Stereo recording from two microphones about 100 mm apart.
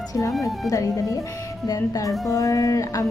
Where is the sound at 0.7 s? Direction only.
35° left (ahead or behind).